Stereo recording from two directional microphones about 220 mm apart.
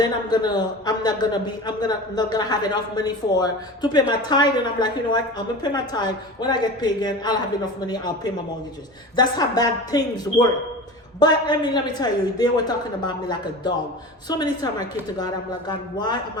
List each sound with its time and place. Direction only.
0.0 s a man's voice: 20° left (ahead or behind)
11.2 s a man's voice: 20° left (ahead or behind)